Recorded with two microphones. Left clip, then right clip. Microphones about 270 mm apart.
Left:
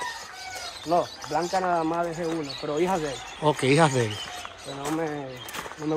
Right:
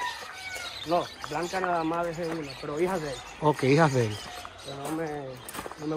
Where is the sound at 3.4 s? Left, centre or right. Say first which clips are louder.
Left 2 dB; centre.